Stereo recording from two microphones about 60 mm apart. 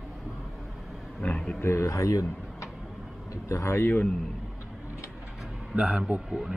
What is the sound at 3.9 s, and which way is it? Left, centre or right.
Speech, left.